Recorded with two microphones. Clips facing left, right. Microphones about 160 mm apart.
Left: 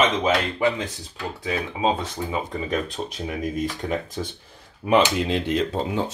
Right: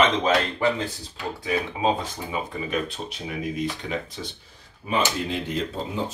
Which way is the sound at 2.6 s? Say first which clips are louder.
Left 2 dB; 45° left (ahead or behind).